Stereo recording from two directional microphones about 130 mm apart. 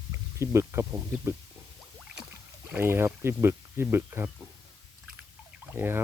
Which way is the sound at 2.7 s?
20° right (ahead or behind).